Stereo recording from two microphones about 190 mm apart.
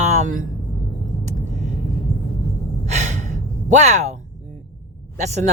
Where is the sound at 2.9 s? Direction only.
40° right (ahead or behind).